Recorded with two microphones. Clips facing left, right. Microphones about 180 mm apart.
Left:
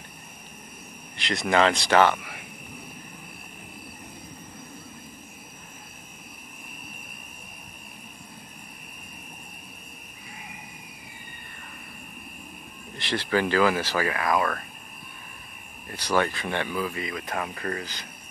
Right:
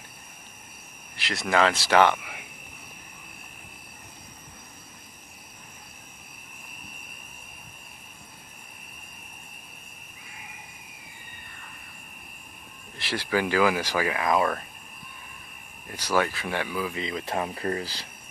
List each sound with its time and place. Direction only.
1.1 s speech: centre (ahead or behind)
12.9 s speech: 5° right (ahead or behind)
15.9 s speech: 10° right (ahead or behind)
16.9 s speech: 25° right (ahead or behind)